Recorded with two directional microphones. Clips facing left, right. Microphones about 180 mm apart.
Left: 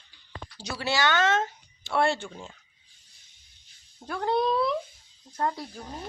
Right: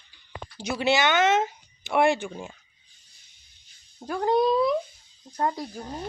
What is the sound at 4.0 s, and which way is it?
Speech, 15° right (ahead or behind).